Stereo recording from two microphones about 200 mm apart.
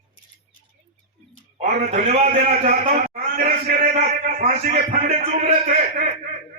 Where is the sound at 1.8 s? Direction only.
50° right (ahead or behind).